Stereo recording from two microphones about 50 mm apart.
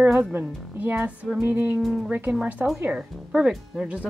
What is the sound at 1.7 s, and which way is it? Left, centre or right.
Speech, centre.